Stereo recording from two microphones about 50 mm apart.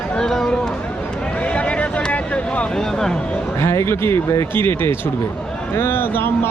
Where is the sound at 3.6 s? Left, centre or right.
Left.